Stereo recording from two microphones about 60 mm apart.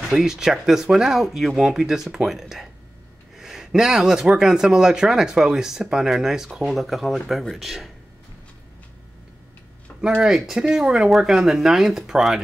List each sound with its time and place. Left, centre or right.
0.1 s speech: centre
9.9 s a sound: left
10.2 s speech: centre